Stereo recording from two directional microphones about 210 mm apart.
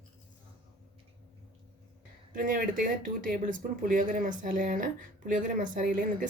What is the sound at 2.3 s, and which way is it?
Speech, 40° right (ahead or behind).